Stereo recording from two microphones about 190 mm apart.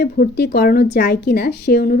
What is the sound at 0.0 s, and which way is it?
Speech, 55° left (ahead or behind).